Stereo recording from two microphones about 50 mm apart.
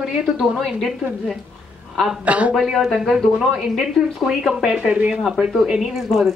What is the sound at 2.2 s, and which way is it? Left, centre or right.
Speech, right.